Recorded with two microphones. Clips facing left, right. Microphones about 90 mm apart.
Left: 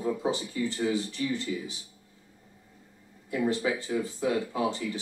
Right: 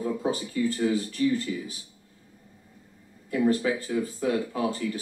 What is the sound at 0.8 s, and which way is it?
Speech, 25° left (ahead or behind).